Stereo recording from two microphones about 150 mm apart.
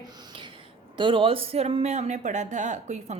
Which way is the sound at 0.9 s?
35° right (ahead or behind).